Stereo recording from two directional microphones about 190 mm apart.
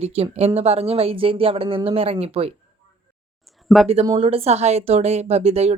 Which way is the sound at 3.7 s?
Centre (ahead or behind).